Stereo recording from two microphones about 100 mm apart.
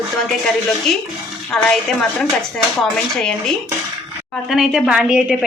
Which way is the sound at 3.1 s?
5° left (ahead or behind).